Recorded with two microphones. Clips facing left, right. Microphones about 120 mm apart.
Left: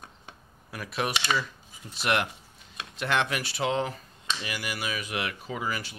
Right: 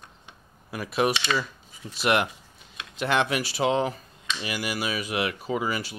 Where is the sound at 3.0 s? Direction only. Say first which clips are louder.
Right 3 dB; 10° right (ahead or behind).